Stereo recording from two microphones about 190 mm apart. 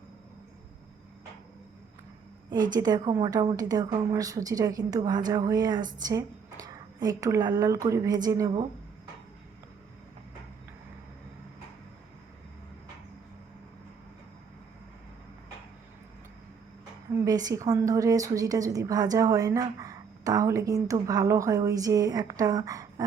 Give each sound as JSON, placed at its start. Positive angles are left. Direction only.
{"t": 2.5, "sound": "a woman's voice", "side_deg": -20}
{"t": 17.2, "sound": "a woman's voice", "side_deg": -20}